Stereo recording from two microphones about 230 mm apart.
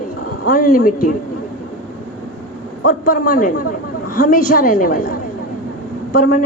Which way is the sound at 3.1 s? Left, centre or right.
Left.